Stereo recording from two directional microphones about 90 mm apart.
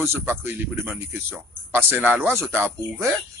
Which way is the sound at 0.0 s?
25° right (ahead or behind).